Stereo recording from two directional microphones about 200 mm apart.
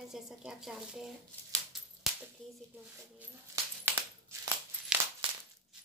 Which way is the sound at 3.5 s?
10° right (ahead or behind).